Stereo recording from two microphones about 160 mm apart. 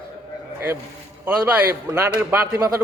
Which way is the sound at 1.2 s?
10° right (ahead or behind).